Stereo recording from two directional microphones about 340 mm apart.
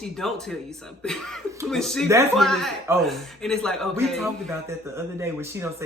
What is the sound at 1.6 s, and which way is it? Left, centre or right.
Speech, centre.